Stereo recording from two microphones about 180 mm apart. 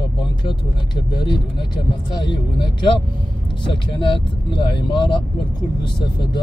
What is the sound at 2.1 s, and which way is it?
Speech, 25° left (ahead or behind).